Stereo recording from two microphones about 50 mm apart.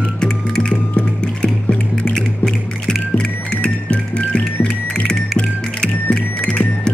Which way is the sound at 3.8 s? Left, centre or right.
Left.